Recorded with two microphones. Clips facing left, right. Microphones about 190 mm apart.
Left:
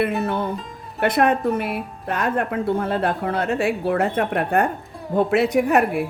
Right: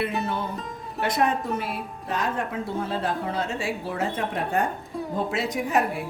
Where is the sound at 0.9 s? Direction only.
60° left (ahead or behind).